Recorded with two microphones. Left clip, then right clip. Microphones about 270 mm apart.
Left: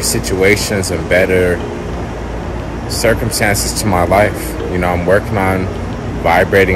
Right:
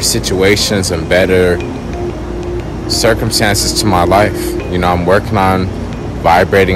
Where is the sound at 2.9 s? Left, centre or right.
Centre.